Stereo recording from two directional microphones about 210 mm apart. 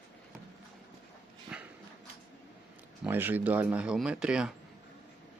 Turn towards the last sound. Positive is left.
turn(degrees=-5)  # may be behind; listen again after turning